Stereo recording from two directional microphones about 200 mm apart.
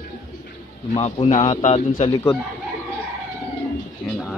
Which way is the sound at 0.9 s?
30° left (ahead or behind).